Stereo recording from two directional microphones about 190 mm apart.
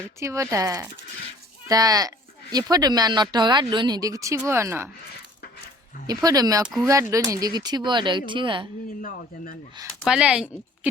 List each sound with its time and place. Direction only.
0.2 s speech: 15° right (ahead or behind)
6.1 s speech: 20° right (ahead or behind)
9.0 s speech: 45° left (ahead or behind)
10.0 s speech: 5° right (ahead or behind)